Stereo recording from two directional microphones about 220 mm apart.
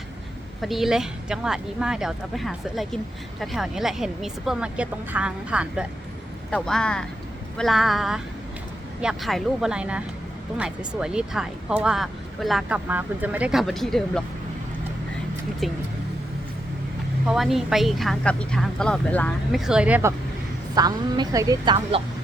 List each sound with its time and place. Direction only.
0.6 s speech: centre (ahead or behind)
15.6 s speech: centre (ahead or behind)
17.2 s a woman's voice: centre (ahead or behind); by 22.0 s 20° right (ahead or behind)